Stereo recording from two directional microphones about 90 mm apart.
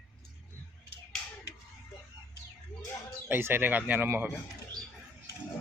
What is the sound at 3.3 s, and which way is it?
Speech, 25° right (ahead or behind).